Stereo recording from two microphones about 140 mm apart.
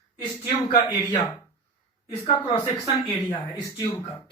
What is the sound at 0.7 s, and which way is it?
Speech, 35° left (ahead or behind).